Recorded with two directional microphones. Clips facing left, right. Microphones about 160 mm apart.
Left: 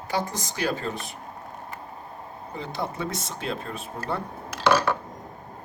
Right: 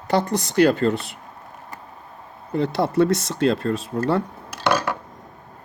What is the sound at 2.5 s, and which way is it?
Speech, 75° right (ahead or behind).